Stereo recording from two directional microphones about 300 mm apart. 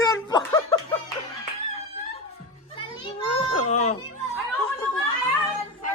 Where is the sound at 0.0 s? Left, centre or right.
Centre.